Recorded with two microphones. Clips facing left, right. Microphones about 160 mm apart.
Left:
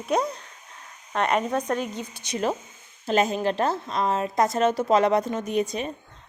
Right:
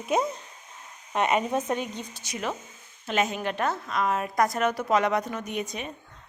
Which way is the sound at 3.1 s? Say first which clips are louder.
Left 5 dB; 35° left (ahead or behind).